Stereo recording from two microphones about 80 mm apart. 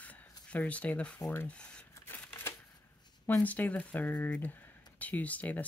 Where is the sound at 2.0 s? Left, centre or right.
Left.